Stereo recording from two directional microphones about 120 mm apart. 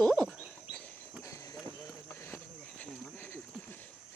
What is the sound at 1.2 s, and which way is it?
Run, 25° left (ahead or behind).